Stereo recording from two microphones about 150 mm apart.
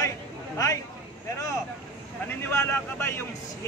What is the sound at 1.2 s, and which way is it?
Speech, 20° left (ahead or behind).